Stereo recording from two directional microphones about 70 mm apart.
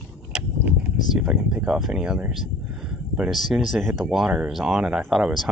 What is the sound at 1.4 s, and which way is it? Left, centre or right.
Speech, centre.